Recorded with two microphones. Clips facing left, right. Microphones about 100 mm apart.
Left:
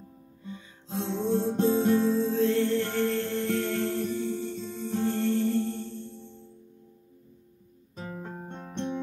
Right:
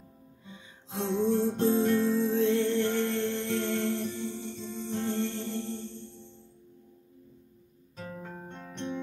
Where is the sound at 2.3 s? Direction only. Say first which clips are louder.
Left 1 dB; 20° right (ahead or behind).